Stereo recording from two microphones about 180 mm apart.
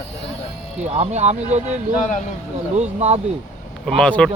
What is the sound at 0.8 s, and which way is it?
Speech, 35° right (ahead or behind).